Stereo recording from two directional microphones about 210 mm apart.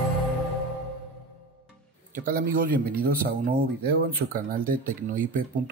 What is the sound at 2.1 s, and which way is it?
Speech, 40° right (ahead or behind).